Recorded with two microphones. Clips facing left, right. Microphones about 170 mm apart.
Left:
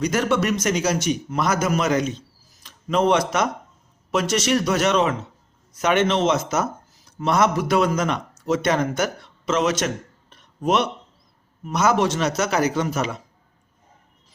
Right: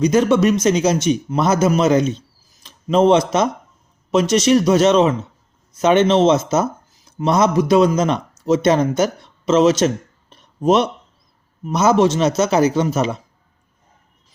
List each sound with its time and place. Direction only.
0.0 s a man's voice: 20° right (ahead or behind)